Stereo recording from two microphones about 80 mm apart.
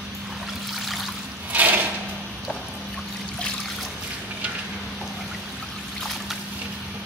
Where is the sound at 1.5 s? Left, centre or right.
Right.